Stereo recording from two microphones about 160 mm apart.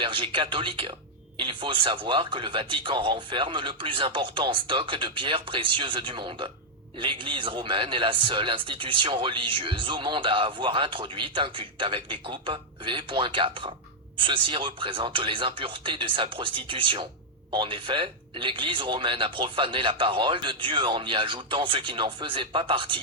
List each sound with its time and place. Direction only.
0.0 s a man's voice: 30° right (ahead or behind)